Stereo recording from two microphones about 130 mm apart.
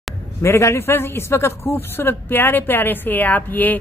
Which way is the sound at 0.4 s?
20° left (ahead or behind).